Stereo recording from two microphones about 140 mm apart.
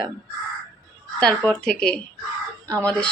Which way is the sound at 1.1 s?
5° left (ahead or behind).